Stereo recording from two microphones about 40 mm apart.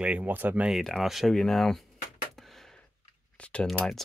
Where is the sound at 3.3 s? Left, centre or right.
Left.